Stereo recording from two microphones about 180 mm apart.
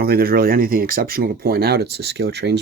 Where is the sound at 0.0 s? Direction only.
55° right (ahead or behind).